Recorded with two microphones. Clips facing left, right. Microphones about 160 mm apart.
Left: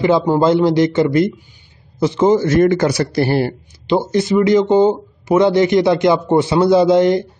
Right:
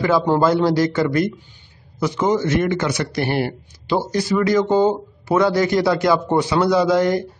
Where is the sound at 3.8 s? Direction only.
20° left (ahead or behind).